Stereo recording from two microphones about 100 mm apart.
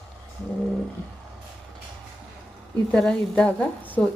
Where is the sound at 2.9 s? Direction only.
10° left (ahead or behind).